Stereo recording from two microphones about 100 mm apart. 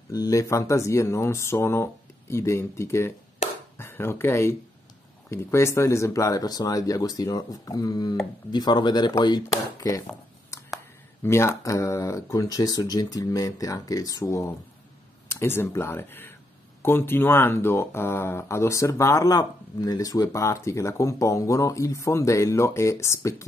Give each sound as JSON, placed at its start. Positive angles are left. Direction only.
{"t": 0.1, "sound": "speech", "side_deg": 35}
{"t": 3.4, "sound": "chopping", "side_deg": 90}
{"t": 3.7, "sound": "speech", "side_deg": 25}
{"t": 10.5, "sound": "a sound", "side_deg": 30}
{"t": 11.2, "sound": "speech", "side_deg": 25}